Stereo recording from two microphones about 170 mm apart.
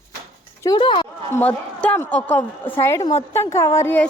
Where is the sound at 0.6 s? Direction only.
25° left (ahead or behind).